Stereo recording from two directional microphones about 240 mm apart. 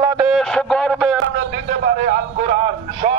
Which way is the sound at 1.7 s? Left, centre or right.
Right.